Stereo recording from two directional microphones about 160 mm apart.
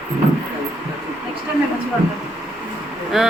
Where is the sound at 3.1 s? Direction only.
5° right (ahead or behind).